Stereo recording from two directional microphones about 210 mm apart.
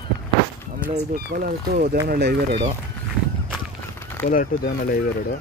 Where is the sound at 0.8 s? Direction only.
45° right (ahead or behind).